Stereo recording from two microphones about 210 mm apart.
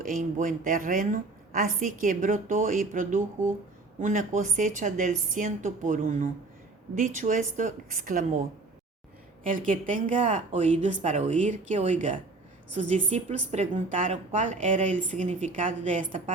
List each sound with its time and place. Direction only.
0.0 s a woman's voice: 35° right (ahead or behind)
9.4 s a woman's voice: 40° right (ahead or behind)